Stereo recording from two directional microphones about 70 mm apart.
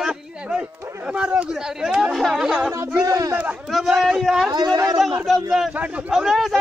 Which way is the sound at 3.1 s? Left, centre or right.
Right.